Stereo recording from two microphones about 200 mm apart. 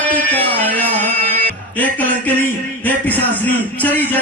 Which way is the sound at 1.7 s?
10° left (ahead or behind).